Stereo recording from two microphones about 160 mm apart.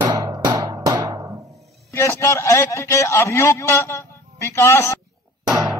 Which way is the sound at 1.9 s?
15° left (ahead or behind).